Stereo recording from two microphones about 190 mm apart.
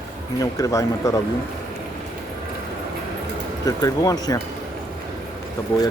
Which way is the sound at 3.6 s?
20° left (ahead or behind).